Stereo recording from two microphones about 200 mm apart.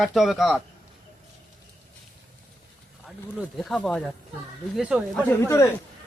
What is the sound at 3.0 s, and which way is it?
Speech, centre (ahead or behind).